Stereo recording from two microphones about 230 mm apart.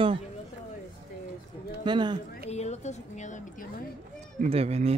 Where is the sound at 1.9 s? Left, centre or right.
Centre.